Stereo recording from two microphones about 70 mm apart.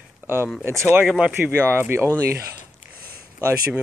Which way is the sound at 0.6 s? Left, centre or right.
Right.